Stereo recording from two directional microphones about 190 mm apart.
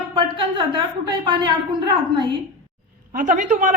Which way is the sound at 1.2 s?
25° right (ahead or behind).